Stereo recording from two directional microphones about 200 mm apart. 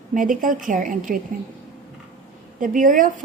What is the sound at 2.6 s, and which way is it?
Speech, 40° right (ahead or behind).